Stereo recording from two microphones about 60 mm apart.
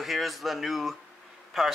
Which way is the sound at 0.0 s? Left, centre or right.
Centre.